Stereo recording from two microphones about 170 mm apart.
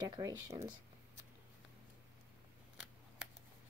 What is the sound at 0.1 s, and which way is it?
Speech, 20° right (ahead or behind).